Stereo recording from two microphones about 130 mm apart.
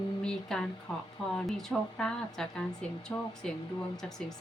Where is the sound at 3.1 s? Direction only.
15° left (ahead or behind).